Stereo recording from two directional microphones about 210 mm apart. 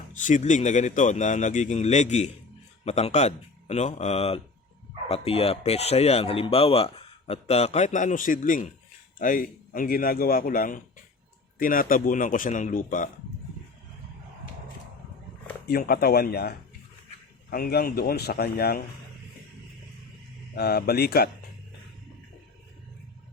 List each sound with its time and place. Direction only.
0.1 s speech: 35° left (ahead or behind)
15.7 s speech: 45° left (ahead or behind)
20.6 s speech: 50° left (ahead or behind)